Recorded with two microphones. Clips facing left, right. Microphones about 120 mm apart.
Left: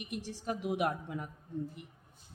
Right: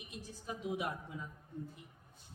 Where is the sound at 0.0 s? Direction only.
80° left.